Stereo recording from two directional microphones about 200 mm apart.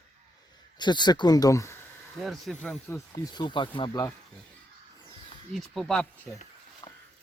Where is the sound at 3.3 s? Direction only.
20° left (ahead or behind).